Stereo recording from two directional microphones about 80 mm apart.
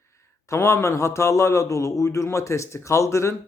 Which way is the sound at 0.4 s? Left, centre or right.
Left.